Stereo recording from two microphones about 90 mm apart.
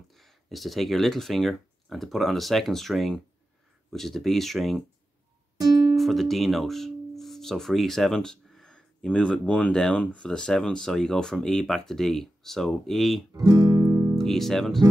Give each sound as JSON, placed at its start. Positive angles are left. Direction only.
{"t": 0.1, "sound": "speech", "side_deg": 0}
{"t": 5.6, "sound": "music", "side_deg": -45}
{"t": 5.9, "sound": "speech", "side_deg": 0}
{"t": 13.5, "sound": "music", "side_deg": -50}
{"t": 14.2, "sound": "speech", "side_deg": 5}